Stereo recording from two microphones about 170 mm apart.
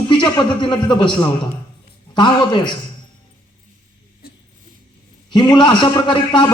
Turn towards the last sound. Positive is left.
turn(degrees=25)  # may be behind; listen again after turning